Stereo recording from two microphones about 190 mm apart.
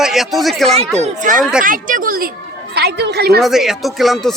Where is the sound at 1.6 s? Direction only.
45° right (ahead or behind).